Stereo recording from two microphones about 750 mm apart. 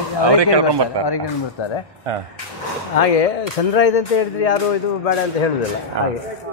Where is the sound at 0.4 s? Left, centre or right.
Right.